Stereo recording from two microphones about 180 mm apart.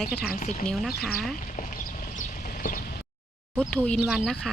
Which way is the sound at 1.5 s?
45° left (ahead or behind).